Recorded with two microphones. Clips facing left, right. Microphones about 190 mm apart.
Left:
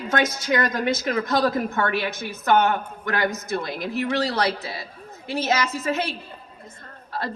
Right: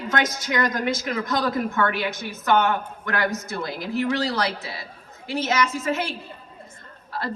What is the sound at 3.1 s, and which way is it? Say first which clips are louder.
A man's voice: left 1 dB; 20° left (ahead or behind).